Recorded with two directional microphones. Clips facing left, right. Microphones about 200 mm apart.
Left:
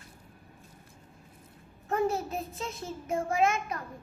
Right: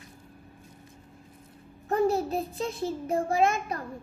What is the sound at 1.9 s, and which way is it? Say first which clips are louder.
A child's voice: right 4 dB; 35° right (ahead or behind).